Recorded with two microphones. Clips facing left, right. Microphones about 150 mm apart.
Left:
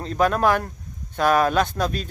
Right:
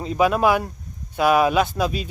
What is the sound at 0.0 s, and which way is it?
Speech, 10° right (ahead or behind).